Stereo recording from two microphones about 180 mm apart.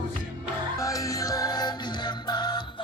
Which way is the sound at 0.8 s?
20° left (ahead or behind).